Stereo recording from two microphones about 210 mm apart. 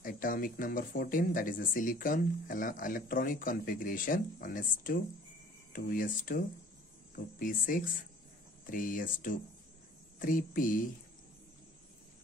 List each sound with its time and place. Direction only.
0.0 s speech: 40° left (ahead or behind)